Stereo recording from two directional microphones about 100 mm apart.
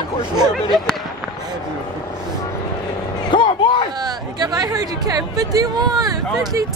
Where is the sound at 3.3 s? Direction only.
50° left (ahead or behind).